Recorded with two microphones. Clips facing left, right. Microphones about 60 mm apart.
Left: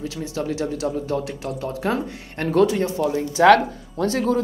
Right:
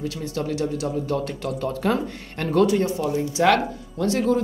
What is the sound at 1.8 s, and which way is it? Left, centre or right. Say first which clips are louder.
Speech: even; left.